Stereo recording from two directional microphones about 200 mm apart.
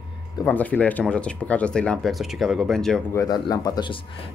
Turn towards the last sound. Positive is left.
turn(degrees=20)  # may be behind; listen again after turning